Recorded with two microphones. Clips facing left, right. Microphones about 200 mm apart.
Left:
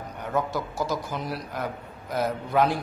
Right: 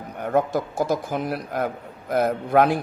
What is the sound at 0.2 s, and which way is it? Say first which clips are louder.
A man's voice: right 6 dB; 50° right (ahead or behind).